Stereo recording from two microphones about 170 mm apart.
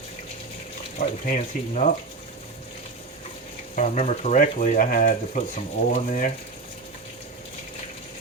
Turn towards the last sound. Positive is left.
turn(degrees=50)  # may be behind; listen again after turning